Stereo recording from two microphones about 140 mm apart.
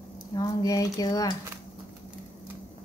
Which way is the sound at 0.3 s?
30° left (ahead or behind).